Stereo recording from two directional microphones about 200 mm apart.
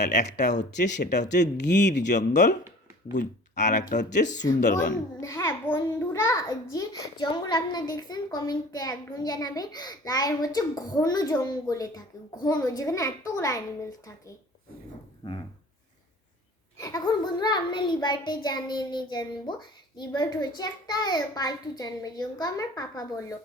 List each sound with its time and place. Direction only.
0.2 s speech: 35° left (ahead or behind)
1.5 s speech: 60° left (ahead or behind)
2.0 s speech: 40° left (ahead or behind)
3.5 s speech: 35° left (ahead or behind)
5.2 s a child's voice: 15° left (ahead or behind)
15.2 s speech: 25° left (ahead or behind)
16.7 s a woman's voice: 15° left (ahead or behind)